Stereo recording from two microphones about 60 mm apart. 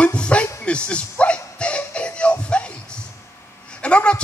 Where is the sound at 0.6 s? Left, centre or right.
Centre.